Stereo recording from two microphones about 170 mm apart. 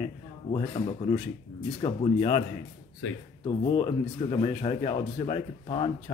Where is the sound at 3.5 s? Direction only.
30° left (ahead or behind).